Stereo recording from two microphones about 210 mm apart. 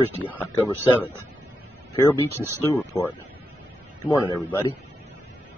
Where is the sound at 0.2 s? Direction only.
10° left (ahead or behind).